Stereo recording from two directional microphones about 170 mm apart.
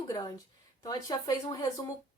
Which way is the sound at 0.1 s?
20° left (ahead or behind).